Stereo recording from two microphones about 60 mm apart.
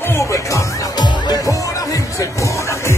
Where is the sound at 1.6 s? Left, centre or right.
Left.